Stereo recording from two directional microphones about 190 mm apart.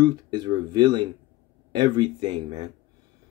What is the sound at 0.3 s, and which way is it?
Speech, 25° right (ahead or behind).